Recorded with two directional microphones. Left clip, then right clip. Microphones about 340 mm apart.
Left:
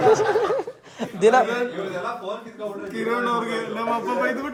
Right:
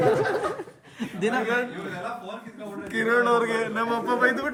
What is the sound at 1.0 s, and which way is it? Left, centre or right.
Chuckle, centre.